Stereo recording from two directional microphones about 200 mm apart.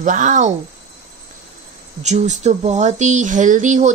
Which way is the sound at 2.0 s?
35° right (ahead or behind).